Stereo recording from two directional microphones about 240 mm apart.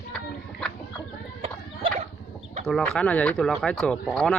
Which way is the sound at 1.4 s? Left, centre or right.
Right.